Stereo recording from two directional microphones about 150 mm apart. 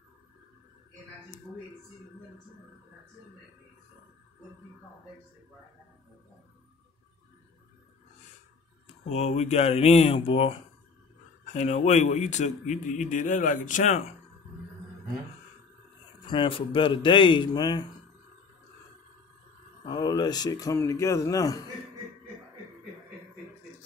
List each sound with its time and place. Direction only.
9.0 s a man's voice: 45° left (ahead or behind)
11.4 s a man's voice: 50° left (ahead or behind)
16.3 s a man's voice: 35° left (ahead or behind)
19.9 s speech: 30° left (ahead or behind)